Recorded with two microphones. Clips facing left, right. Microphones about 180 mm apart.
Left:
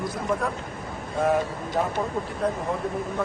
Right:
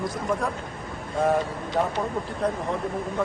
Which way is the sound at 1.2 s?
Centre (ahead or behind).